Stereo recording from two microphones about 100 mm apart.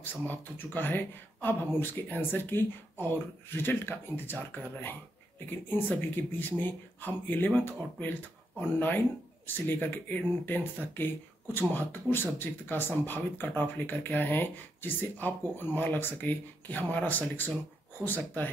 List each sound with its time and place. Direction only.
0.0 s speech: 20° left (ahead or behind)
5.7 s speech: 20° left (ahead or behind)